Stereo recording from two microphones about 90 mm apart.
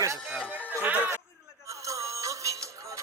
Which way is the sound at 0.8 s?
20° right (ahead or behind).